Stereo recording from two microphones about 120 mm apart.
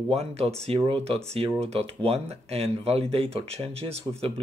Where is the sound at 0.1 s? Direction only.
60° right (ahead or behind).